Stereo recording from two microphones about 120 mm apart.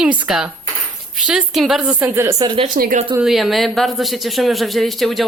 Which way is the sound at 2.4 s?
45° right (ahead or behind).